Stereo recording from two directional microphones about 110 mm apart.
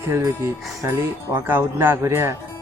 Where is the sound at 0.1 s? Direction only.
25° right (ahead or behind).